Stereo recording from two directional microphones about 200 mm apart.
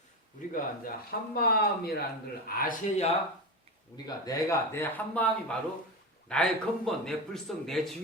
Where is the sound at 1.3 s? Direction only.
50° left (ahead or behind).